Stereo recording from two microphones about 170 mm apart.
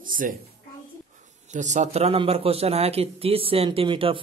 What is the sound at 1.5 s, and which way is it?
A man's voice, 45° right (ahead or behind).